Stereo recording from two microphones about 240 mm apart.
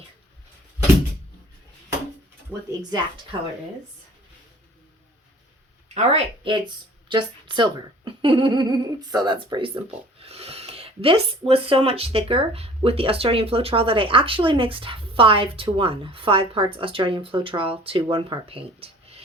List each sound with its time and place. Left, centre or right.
3.3 s speech: centre
5.9 s speech: right